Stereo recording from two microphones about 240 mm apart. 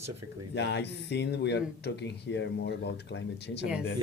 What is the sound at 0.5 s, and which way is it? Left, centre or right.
Speech, left.